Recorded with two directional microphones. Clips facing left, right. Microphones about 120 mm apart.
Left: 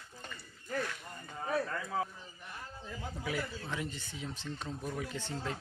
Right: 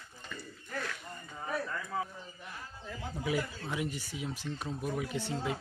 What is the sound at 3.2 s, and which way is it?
Speech, 15° right (ahead or behind).